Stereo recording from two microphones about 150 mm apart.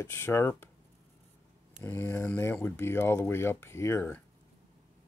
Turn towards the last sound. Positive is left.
turn(degrees=15)  # may be behind; listen again after turning